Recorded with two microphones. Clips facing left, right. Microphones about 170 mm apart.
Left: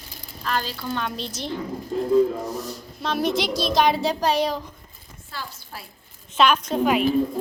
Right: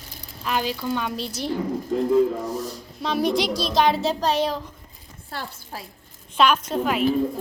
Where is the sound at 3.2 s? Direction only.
40° right (ahead or behind).